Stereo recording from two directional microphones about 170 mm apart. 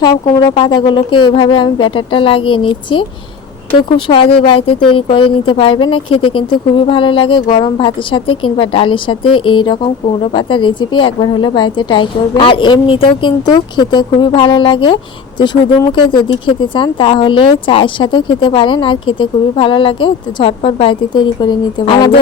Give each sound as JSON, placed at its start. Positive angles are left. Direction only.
{"t": 0.0, "sound": "speech", "side_deg": 25}